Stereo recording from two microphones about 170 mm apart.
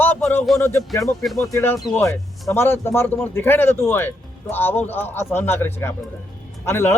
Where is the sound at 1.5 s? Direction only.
15° left (ahead or behind).